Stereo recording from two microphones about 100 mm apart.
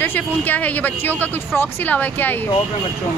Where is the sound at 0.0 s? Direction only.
20° left (ahead or behind).